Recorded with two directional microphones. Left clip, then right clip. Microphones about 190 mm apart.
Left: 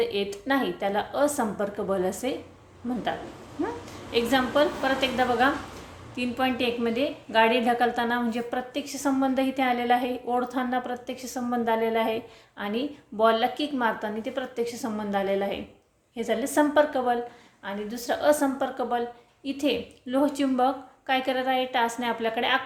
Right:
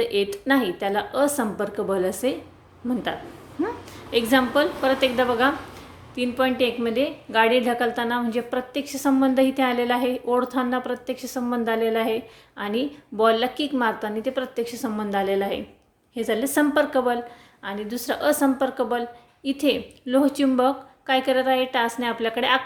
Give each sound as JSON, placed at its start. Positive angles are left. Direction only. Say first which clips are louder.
{"t": 0.0, "sound": "a woman's voice", "louder": "right 4 dB", "side_deg": -25}
{"t": 4.1, "sound": "a woman's voice", "louder": "right 4 dB", "side_deg": -25}